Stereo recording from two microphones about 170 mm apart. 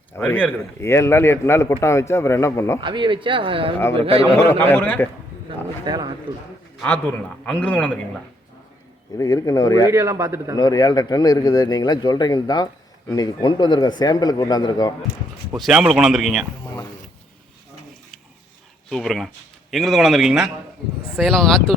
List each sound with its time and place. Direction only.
0.2 s a man's voice: 10° left (ahead or behind)
2.8 s speech: 30° right (ahead or behind)
3.8 s a man's voice: 15° left (ahead or behind)
5.8 s speech: 25° right (ahead or behind)
6.7 s a man's voice: 10° left (ahead or behind)
9.1 s speech: 20° left (ahead or behind)
9.9 s a man's voice: 15° right (ahead or behind)
10.6 s speech: 20° left (ahead or behind)
15.5 s speech: centre (ahead or behind)
18.9 s speech: centre (ahead or behind)